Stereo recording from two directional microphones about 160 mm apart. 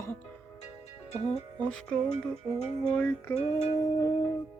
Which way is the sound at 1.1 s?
45° left (ahead or behind).